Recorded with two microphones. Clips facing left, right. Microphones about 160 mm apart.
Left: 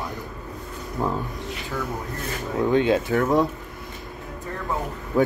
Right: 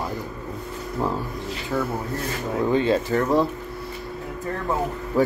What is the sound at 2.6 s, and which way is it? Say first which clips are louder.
Speech: left 1 dB; centre (ahead or behind).